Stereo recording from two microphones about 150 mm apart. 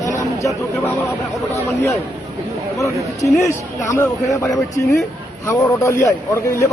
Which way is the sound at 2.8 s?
20° left (ahead or behind).